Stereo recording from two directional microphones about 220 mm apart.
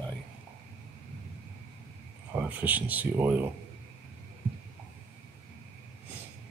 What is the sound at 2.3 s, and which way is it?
Speech, 5° right (ahead or behind).